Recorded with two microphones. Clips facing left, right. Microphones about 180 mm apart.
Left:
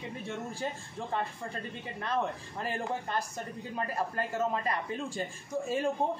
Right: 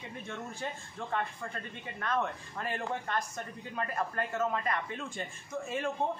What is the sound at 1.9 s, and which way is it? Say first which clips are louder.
A man's voice: even; 25° left (ahead or behind).